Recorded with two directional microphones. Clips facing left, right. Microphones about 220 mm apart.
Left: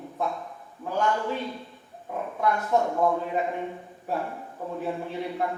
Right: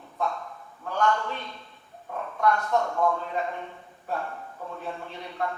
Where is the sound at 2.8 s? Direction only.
20° left (ahead or behind).